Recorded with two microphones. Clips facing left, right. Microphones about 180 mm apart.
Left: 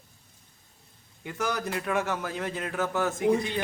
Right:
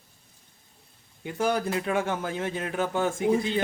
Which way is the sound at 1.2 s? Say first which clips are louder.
Right 4 dB; 30° right (ahead or behind).